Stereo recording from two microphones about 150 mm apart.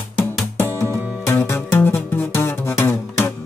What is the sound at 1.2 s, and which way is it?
Music, 15° left (ahead or behind).